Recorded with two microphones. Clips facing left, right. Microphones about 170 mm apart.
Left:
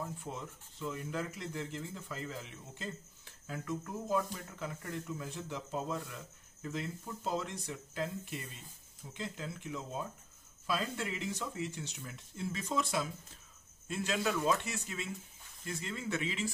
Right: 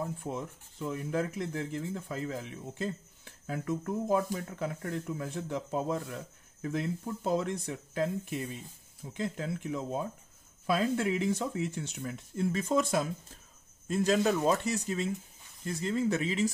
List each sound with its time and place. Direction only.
0.7 s a man's voice: 50° right (ahead or behind)